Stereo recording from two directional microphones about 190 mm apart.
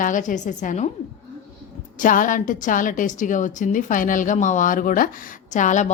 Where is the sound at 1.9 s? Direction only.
45° left (ahead or behind).